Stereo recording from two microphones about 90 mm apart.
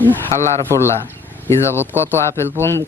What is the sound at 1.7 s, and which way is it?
Speech, 20° right (ahead or behind).